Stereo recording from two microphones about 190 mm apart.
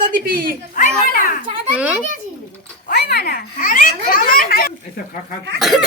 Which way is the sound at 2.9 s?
55° left (ahead or behind).